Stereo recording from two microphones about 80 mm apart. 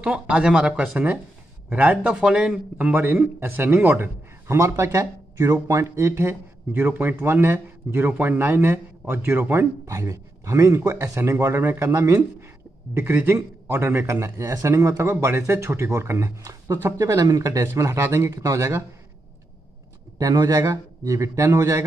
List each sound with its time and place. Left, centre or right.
0.0 s a man's voice: centre; by 16.3 s right
16.4 s a man's voice: right
17.6 s a man's voice: right
20.2 s a man's voice: right